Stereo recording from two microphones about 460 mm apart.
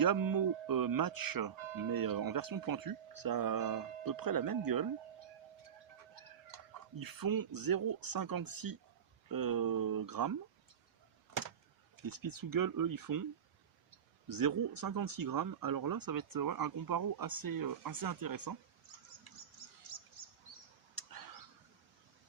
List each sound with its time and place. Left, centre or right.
0.0 s speech: right
7.0 s speech: right
11.9 s speech: right
14.3 s speech: right
19.9 s bird: right
20.9 s a sound: right